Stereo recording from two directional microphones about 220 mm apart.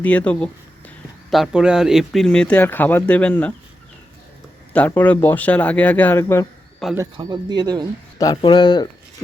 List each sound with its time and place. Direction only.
0.0 s speech: 5° left (ahead or behind)
4.7 s speech: 5° left (ahead or behind)
6.9 s speech: 15° right (ahead or behind)
8.2 s speech: 20° left (ahead or behind)